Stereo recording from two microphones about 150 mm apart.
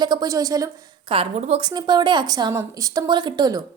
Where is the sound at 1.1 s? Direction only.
40° right (ahead or behind).